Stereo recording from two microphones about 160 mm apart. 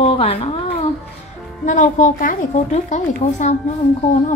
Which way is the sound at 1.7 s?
50° left (ahead or behind).